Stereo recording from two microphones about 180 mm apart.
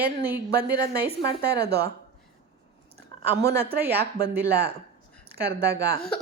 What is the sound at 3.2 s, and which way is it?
A woman's voice, 65° right (ahead or behind).